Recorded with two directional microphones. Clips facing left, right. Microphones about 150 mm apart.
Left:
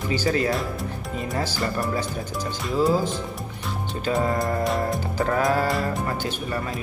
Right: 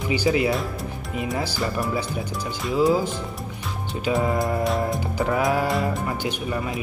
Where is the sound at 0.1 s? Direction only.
10° right (ahead or behind).